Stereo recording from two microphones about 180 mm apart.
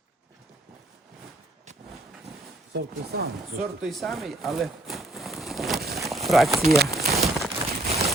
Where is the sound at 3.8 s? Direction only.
Centre (ahead or behind).